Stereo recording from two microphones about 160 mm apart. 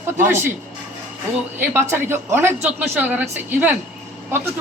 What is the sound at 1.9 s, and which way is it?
Speech, 15° right (ahead or behind).